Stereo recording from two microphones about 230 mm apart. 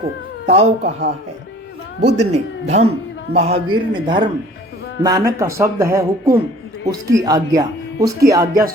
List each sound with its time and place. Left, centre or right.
0.4 s speech: right
0.8 s a man's voice: right
2.1 s a man's voice: right; by 8.6 s centre